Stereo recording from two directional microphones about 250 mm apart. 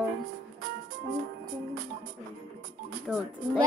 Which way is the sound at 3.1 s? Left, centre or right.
Centre.